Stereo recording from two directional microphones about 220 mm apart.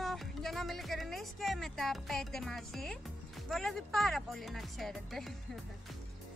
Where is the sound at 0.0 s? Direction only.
Centre (ahead or behind).